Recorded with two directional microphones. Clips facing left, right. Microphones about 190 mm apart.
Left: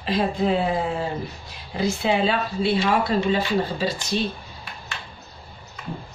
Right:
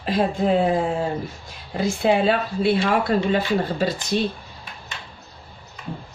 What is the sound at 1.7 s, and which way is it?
Speech, 50° right (ahead or behind).